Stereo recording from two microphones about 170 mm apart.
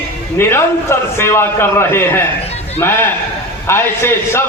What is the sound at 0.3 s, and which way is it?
A man's voice, 15° left (ahead or behind).